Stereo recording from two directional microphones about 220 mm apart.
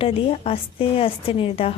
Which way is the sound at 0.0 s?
25° left (ahead or behind).